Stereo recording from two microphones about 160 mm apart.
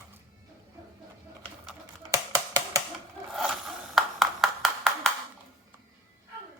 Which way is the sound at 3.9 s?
Centre (ahead or behind).